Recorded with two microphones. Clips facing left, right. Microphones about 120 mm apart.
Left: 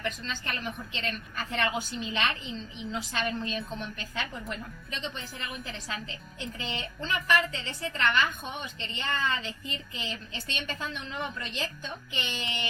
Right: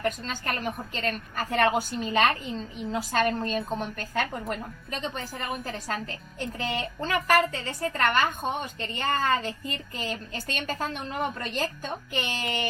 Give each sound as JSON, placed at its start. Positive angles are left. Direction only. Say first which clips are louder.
{"t": 0.0, "sound": "a woman's voice", "louder": "right 5 dB", "side_deg": -45}